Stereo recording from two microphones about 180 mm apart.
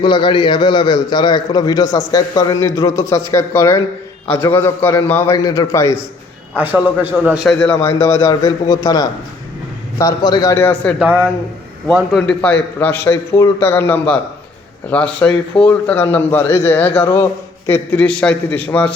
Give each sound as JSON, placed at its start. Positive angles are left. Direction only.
{"t": 0.0, "sound": "a man's voice", "side_deg": 25}
{"t": 6.6, "sound": "a man's voice", "side_deg": -10}
{"t": 7.7, "sound": "a man's voice", "side_deg": 15}
{"t": 11.0, "sound": "a man's voice", "side_deg": -10}
{"t": 13.1, "sound": "a man's voice", "side_deg": 15}